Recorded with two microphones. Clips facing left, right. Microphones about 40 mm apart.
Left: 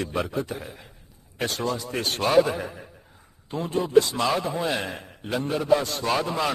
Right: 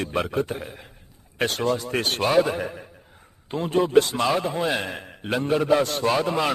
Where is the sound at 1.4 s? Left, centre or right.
Right.